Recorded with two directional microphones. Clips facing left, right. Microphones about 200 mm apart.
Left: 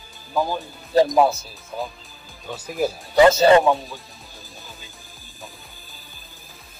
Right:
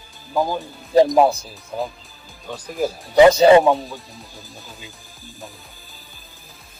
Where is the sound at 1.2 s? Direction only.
15° right (ahead or behind).